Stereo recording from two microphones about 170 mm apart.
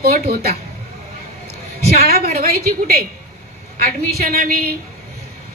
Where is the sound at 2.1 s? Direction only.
60° right (ahead or behind).